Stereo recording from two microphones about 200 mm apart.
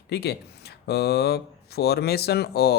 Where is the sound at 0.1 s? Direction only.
55° left (ahead or behind).